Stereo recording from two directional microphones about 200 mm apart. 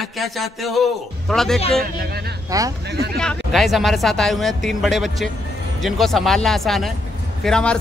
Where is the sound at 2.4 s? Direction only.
15° right (ahead or behind).